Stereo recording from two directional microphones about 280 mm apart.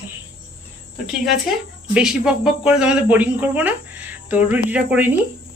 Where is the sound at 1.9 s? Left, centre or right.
Centre.